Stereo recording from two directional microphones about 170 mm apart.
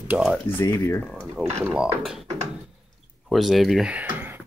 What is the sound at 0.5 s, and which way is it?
Speech, 15° left (ahead or behind).